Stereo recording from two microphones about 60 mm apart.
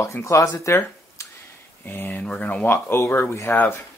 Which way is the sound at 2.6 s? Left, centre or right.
Left.